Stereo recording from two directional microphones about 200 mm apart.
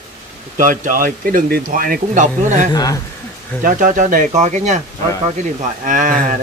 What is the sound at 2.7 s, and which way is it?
Speech, 20° left (ahead or behind).